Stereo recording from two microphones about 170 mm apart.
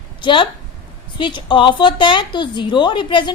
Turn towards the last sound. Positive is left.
turn(degrees=30)  # may be behind; listen again after turning